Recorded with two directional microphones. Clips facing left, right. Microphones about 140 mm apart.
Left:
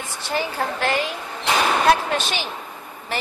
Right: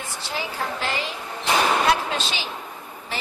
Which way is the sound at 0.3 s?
55° left (ahead or behind).